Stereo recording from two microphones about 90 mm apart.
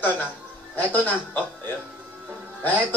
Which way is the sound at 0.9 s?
20° left (ahead or behind).